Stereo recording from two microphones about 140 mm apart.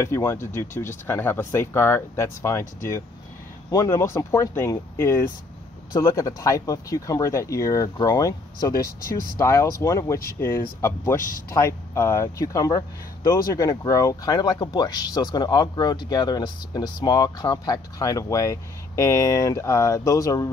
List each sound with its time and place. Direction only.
0.0 s speech: 20° left (ahead or behind)